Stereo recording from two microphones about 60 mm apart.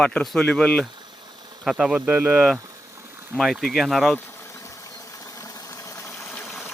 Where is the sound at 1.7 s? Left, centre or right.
Centre.